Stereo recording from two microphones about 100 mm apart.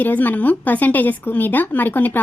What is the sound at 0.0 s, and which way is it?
A woman's voice, 20° left (ahead or behind).